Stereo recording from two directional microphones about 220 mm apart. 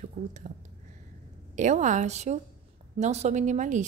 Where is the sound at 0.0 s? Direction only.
35° right (ahead or behind).